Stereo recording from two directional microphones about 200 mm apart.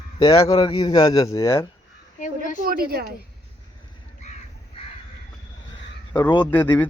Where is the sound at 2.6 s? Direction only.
45° right (ahead or behind).